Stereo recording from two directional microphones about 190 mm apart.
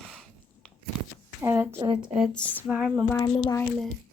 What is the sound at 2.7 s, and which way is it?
Speech, 5° right (ahead or behind).